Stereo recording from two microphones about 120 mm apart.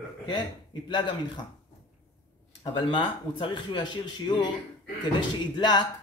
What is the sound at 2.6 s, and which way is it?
Speech, 40° left (ahead or behind).